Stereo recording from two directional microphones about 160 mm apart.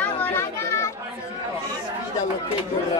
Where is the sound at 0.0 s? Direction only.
15° left (ahead or behind).